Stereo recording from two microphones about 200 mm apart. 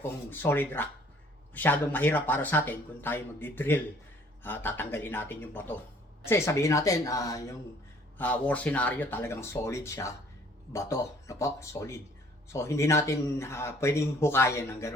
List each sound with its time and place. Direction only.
0.3 s speech: 10° left (ahead or behind)